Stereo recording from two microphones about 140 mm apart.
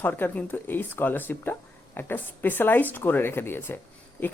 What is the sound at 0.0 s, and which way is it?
Speech, 15° left (ahead or behind).